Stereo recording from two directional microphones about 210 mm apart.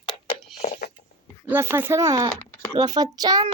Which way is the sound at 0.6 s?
30° left (ahead or behind).